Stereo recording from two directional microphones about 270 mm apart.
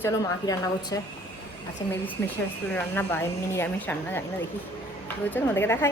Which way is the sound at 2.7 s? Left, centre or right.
Centre.